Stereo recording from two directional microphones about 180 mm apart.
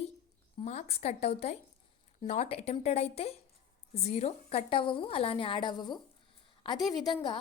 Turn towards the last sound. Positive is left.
turn(degrees=25)  # may be behind; listen again after turning